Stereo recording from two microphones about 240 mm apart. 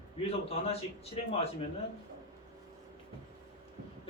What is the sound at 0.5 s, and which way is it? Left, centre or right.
Speech, left.